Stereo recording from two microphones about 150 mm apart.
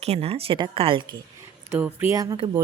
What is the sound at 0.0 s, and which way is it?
Speech, 45° right (ahead or behind).